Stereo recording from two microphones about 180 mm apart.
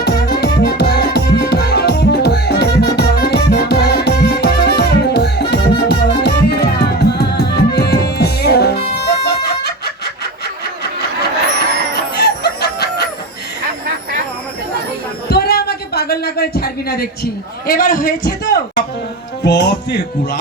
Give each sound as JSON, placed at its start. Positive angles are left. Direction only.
{"t": 0.0, "sound": "music", "side_deg": 65}
{"t": 12.1, "sound": "chicken", "side_deg": 65}
{"t": 15.3, "sound": "a sound", "side_deg": 60}
{"t": 19.5, "sound": "music", "side_deg": 70}